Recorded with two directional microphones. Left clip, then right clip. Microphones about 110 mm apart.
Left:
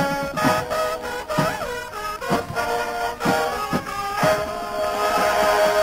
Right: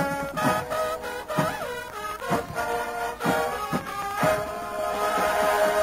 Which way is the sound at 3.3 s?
20° right (ahead or behind).